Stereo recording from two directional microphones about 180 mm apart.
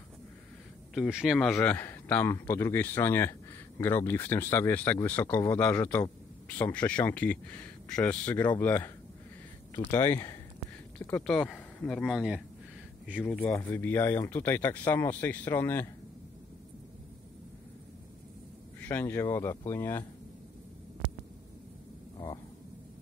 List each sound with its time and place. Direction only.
0.9 s a man's voice: centre (ahead or behind)
13.3 s a man's voice: 10° left (ahead or behind)
18.8 s a man's voice: 10° left (ahead or behind)